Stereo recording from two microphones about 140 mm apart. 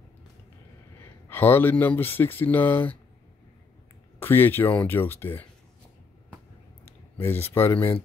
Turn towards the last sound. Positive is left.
turn(degrees=15)  # may be behind; listen again after turning